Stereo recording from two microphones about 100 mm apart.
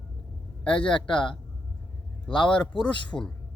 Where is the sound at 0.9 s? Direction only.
55° left (ahead or behind).